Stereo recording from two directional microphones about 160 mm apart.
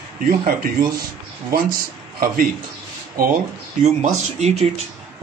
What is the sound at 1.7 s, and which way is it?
Speech, 65° right (ahead or behind).